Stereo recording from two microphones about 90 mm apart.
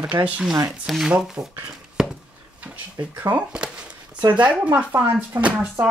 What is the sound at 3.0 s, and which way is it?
Speech, 50° right (ahead or behind).